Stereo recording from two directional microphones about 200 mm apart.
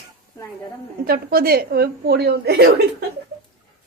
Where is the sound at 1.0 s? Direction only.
50° right (ahead or behind).